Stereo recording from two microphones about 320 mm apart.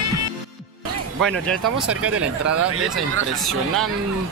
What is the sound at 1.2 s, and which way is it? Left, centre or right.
Speech, centre.